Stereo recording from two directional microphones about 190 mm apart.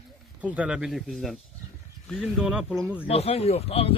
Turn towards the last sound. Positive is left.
turn(degrees=30)  # may be behind; listen again after turning